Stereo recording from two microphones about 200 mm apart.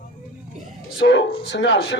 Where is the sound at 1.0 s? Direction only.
65° left (ahead or behind).